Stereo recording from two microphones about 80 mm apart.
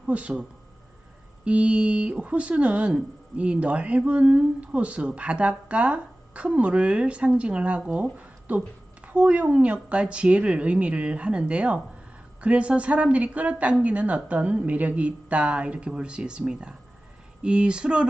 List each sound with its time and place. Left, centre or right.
0.1 s speech: centre
1.5 s speech: centre